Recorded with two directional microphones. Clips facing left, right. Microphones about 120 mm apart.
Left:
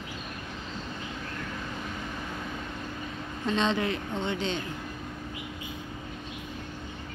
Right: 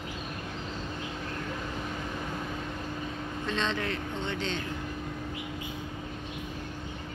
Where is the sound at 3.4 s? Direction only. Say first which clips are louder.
Left 5 dB; 15° left (ahead or behind).